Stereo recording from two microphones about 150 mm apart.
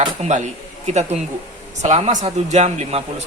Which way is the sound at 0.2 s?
50° right (ahead or behind).